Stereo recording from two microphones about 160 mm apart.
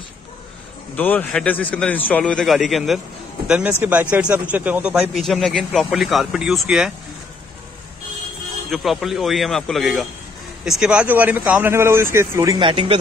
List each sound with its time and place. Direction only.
0.9 s a man's voice: 10° left (ahead or behind)
8.6 s a man's voice: centre (ahead or behind); by 12.6 s 20° right (ahead or behind)
12.6 s speech: 35° right (ahead or behind)